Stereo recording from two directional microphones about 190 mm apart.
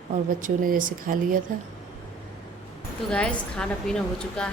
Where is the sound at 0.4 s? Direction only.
45° right (ahead or behind).